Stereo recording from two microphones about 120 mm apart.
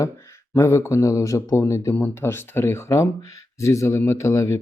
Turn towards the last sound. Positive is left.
turn(degrees=25)  # may be behind; listen again after turning